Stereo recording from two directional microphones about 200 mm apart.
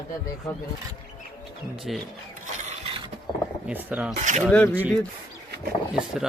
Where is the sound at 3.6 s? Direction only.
5° right (ahead or behind).